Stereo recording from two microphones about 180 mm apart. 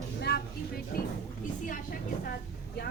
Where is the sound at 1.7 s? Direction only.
50° left (ahead or behind).